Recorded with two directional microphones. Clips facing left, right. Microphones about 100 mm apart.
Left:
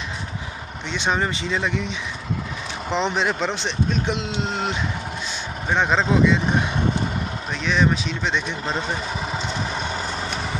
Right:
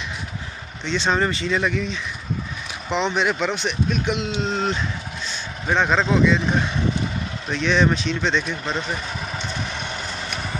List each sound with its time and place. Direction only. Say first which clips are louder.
0.8 s speech: right 2 dB; 15° left (ahead or behind)
3.0 s speech: right 1 dB; 30° left (ahead or behind)
4.4 s speech: right 2 dB; 15° left (ahead or behind)
7.5 s speech: right 2 dB; 5° left (ahead or behind)
8.6 s speech: left 1 dB; 35° left (ahead or behind)